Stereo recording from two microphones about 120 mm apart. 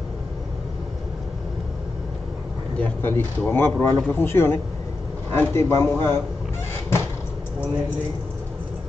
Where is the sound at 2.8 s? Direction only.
15° left (ahead or behind).